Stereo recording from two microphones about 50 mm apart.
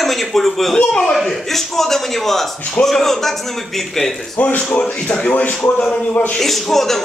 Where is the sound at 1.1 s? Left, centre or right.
Centre.